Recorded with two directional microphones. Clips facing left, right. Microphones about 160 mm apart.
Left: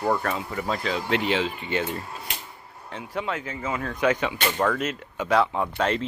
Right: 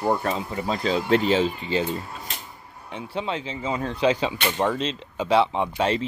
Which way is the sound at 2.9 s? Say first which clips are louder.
Right 1 dB; 20° right (ahead or behind).